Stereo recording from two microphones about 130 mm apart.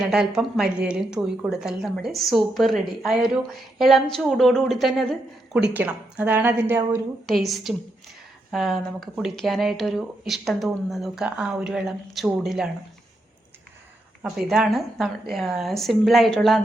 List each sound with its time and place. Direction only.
0.0 s a woman's voice: 5° right (ahead or behind)
5.5 s speech: 10° right (ahead or behind)
7.3 s a woman's voice: centre (ahead or behind)
14.3 s a woman's voice: 5° right (ahead or behind)